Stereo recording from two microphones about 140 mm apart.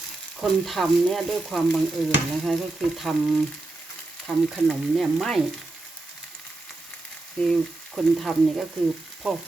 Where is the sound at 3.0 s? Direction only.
Centre (ahead or behind).